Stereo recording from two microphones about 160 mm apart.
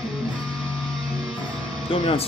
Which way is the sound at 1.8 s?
35° left (ahead or behind).